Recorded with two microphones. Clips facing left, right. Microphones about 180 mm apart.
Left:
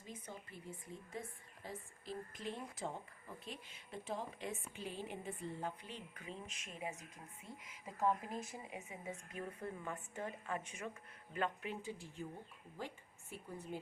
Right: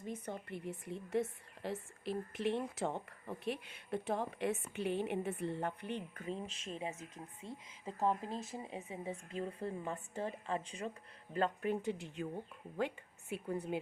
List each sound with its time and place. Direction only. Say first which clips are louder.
0.0 s a woman's voice: right 8 dB; 60° right (ahead or behind)
6.2 s speech: right 8 dB; 35° right (ahead or behind)
11.3 s a woman's voice: right 6 dB; 45° right (ahead or behind); by 13.7 s 70° right (ahead or behind)